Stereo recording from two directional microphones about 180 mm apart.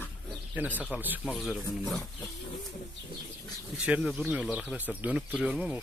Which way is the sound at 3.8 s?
5° right (ahead or behind).